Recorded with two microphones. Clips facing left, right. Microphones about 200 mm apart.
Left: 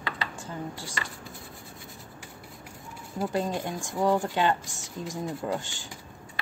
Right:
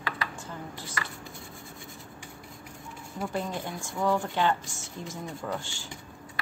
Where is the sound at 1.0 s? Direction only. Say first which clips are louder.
Right 2 dB; 25° left (ahead or behind).